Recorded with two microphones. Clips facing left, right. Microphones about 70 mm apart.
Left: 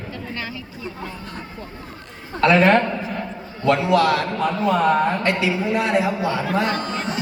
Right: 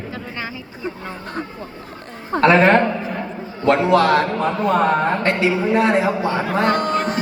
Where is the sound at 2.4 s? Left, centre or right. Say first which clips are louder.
Right 2 dB; right.